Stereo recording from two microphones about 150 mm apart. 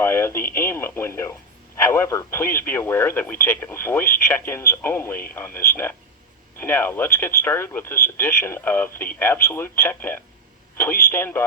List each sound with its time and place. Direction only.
0.0 s speech: 15° left (ahead or behind)